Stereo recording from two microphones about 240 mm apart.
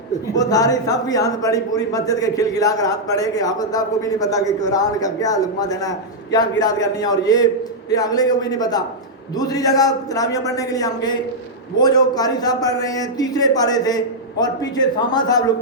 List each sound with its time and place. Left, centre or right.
0.3 s a man's voice: centre